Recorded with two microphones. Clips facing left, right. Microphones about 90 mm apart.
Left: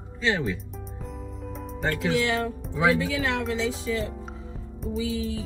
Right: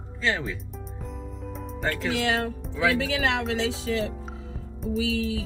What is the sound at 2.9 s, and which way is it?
Music, 90° right.